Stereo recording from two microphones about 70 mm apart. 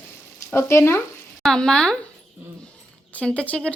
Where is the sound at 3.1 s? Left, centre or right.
Centre.